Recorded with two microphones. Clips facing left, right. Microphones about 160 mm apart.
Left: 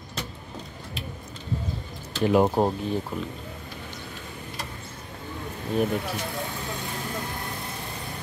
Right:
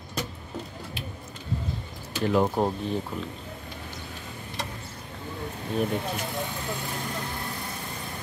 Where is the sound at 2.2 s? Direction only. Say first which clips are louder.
Left 3 dB; 20° left (ahead or behind).